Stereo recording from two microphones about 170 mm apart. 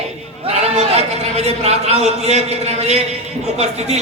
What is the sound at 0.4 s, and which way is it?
A man's voice, 35° right (ahead or behind).